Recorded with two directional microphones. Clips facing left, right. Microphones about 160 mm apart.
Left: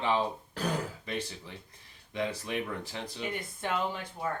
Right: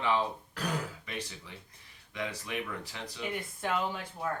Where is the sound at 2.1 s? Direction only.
30° left (ahead or behind).